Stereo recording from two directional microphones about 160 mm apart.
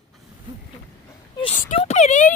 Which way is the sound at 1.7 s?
45° left (ahead or behind).